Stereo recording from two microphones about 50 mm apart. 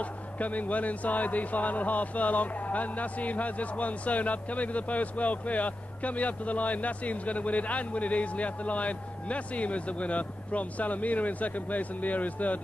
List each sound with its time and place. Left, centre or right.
0.0 s speech: left